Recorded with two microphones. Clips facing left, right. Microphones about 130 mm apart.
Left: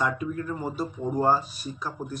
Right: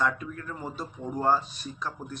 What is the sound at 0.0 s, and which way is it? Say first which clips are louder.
Speech: left 2 dB; 10° left (ahead or behind).